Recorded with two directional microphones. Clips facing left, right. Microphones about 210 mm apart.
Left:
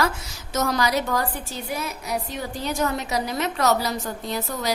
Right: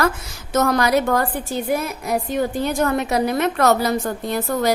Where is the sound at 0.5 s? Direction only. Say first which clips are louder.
Right 6 dB; 55° right (ahead or behind).